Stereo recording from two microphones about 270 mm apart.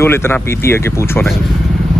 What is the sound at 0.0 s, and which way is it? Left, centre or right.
Speech, centre.